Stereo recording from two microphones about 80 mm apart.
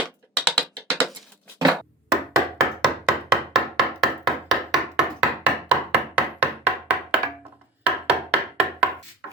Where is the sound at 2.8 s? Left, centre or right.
Centre.